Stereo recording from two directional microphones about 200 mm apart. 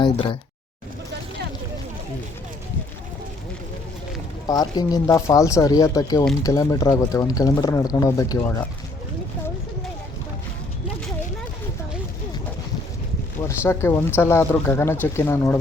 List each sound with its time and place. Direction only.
0.0 s speech: 25° left (ahead or behind)
4.4 s speech: 20° left (ahead or behind)
13.7 s speech: 15° left (ahead or behind)